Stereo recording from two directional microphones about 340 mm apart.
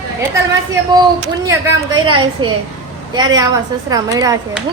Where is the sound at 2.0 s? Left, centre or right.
Centre.